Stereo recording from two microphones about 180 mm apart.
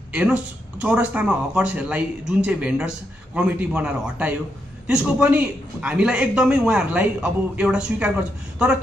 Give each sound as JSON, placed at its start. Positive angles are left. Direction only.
{"t": 0.1, "sound": "a man's voice", "side_deg": -10}